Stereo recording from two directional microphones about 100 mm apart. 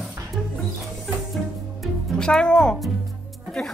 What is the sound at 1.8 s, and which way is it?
Music, 5° left (ahead or behind).